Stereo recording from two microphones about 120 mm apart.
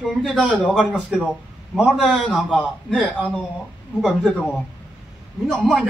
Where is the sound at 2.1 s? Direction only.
5° left (ahead or behind).